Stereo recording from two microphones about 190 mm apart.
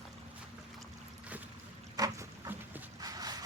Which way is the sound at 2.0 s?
15° right (ahead or behind).